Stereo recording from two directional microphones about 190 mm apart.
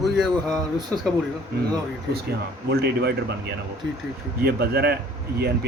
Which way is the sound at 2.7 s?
60° right (ahead or behind).